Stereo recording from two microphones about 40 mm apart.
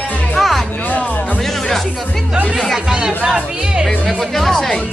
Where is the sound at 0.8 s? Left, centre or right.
Left.